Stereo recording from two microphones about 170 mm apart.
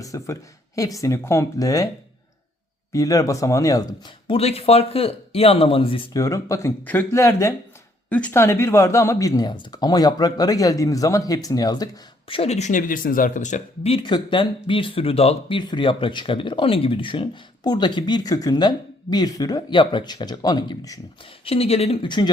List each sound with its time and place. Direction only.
0.0 s speech: 20° left (ahead or behind)
2.9 s speech: 20° left (ahead or behind)
6.1 s speech: 20° left (ahead or behind)
12.3 s speech: 35° left (ahead or behind); by 21.0 s 20° left (ahead or behind)
21.4 s speech: 35° left (ahead or behind)